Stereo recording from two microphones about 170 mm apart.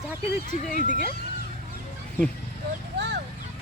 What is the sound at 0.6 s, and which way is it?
Speech, 50° left (ahead or behind).